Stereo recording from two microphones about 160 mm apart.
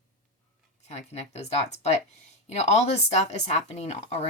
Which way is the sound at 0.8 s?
45° left (ahead or behind).